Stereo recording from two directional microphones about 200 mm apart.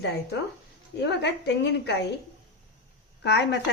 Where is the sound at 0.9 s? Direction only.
60° left (ahead or behind).